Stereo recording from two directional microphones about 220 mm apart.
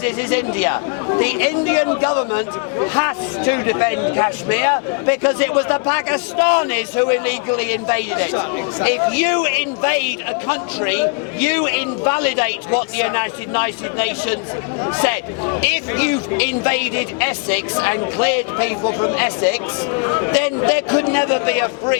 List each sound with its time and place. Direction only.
0.2 s a man's voice: 15° left (ahead or behind)